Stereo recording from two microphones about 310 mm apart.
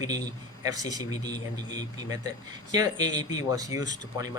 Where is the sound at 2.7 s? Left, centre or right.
Centre.